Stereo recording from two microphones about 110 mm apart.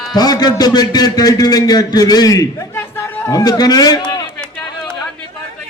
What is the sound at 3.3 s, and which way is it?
Speech, 35° left (ahead or behind).